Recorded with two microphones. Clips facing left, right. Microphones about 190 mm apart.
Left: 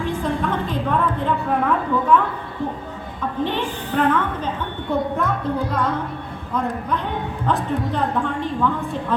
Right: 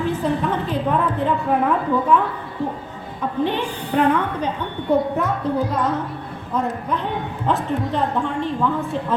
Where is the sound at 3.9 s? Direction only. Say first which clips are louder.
Right 2 dB; 10° right (ahead or behind).